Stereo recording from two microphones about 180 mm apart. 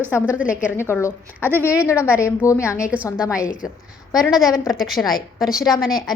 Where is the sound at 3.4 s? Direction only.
50° left (ahead or behind).